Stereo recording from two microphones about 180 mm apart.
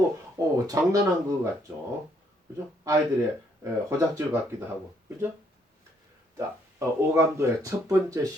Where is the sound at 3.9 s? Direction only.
15° right (ahead or behind).